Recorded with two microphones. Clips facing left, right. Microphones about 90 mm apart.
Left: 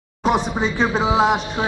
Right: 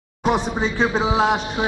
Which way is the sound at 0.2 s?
Centre (ahead or behind).